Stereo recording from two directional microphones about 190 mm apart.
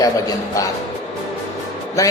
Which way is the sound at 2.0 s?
15° left (ahead or behind).